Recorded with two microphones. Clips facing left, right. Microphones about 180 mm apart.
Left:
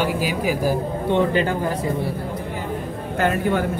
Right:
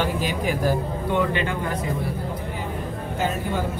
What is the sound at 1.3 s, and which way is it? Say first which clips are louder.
Speech: left 5 dB; 40° left (ahead or behind).